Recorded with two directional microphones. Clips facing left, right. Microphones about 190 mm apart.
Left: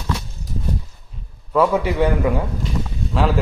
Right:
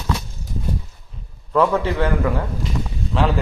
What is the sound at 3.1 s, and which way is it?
Speech, centre (ahead or behind).